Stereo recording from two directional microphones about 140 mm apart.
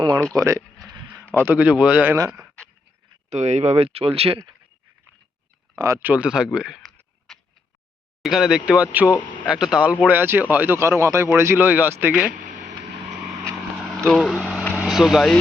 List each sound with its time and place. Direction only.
0.3 s speech: 20° right (ahead or behind)
1.5 s speech: 10° right (ahead or behind)
2.1 s speech: 25° right (ahead or behind)
3.2 s speech: 55° right (ahead or behind)
5.7 s speech: 25° right (ahead or behind)
6.0 s speech: 10° right (ahead or behind)
8.2 s speech: 5° right (ahead or behind)
9.0 s speech: 20° left (ahead or behind)
9.5 s speech: 5° right (ahead or behind)
14.1 s speech: 5° left (ahead or behind)
14.8 s speech: centre (ahead or behind)